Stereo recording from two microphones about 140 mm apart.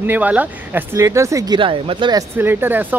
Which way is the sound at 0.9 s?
20° right (ahead or behind).